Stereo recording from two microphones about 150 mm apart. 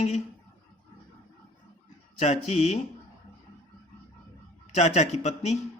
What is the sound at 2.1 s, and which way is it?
Speech, 45° left (ahead or behind).